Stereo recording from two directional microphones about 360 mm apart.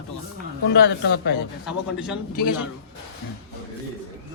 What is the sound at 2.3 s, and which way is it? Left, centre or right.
Speech, left.